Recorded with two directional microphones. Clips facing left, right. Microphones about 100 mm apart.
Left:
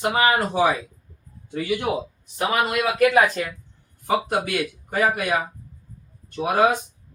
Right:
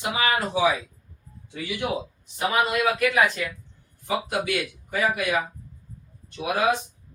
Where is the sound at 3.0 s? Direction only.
40° left (ahead or behind).